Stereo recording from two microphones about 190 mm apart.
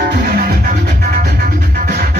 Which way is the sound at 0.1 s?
55° right (ahead or behind).